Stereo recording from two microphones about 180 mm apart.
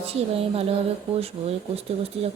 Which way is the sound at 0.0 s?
35° right (ahead or behind).